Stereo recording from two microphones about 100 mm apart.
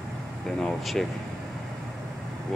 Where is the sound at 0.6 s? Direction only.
5° left (ahead or behind).